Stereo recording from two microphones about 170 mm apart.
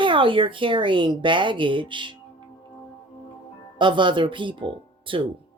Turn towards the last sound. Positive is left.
turn(degrees=-30)  # may be behind; listen again after turning